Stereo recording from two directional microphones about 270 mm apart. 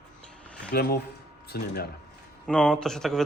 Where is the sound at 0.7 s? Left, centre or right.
Left.